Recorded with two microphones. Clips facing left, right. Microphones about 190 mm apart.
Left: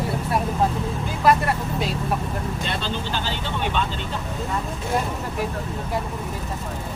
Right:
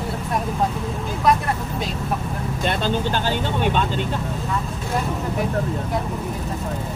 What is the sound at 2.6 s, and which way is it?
Speech, 50° right (ahead or behind).